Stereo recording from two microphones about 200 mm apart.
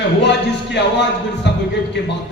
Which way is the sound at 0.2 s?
60° left (ahead or behind).